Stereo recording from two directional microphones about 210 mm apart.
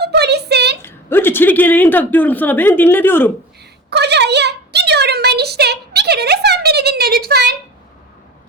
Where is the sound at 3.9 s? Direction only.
55° right (ahead or behind).